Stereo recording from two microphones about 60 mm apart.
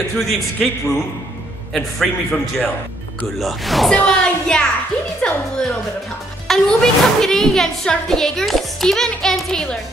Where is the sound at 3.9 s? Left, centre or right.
Centre.